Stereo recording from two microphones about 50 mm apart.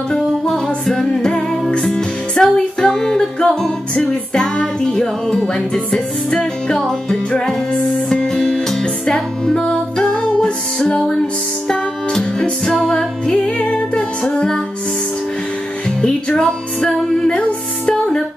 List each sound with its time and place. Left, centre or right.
0.8 s music: centre
12.7 s music: centre
13.3 s music: centre
16.0 s music: centre